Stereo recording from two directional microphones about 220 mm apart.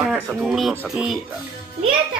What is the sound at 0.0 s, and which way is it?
Speech, centre (ahead or behind).